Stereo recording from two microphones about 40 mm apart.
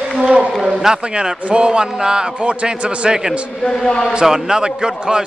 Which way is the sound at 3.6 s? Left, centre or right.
Left.